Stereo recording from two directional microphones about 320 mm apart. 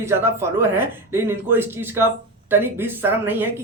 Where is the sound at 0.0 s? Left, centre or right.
Centre.